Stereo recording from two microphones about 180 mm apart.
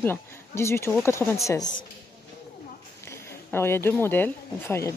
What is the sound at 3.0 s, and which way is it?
Speech, 15° left (ahead or behind).